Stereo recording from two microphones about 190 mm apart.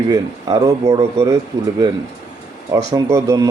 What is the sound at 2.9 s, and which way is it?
Speech, 15° right (ahead or behind).